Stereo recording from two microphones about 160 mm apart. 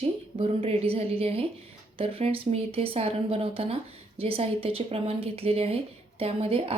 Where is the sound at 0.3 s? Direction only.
35° right (ahead or behind).